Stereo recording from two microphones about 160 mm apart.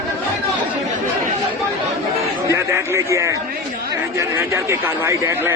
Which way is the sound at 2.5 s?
20° right (ahead or behind).